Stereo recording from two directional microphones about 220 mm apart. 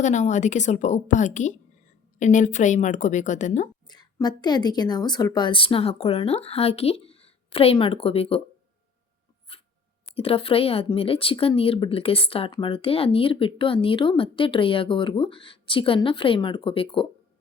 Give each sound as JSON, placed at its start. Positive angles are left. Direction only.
{"t": 0.0, "sound": "a woman's voice", "side_deg": 35}
{"t": 3.8, "sound": "speech", "side_deg": 20}
{"t": 9.5, "sound": "dog", "side_deg": 25}
{"t": 10.2, "sound": "speech", "side_deg": 25}